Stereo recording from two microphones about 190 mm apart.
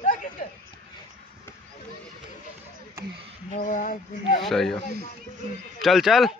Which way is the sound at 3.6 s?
40° left (ahead or behind).